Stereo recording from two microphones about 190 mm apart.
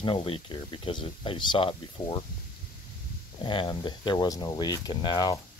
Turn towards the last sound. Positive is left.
turn(degrees=20)  # may be behind; listen again after turning